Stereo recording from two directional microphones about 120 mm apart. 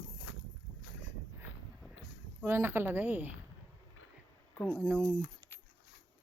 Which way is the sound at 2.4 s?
20° right (ahead or behind).